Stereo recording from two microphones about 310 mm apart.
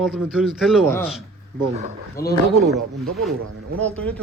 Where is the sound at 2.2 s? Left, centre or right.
Left.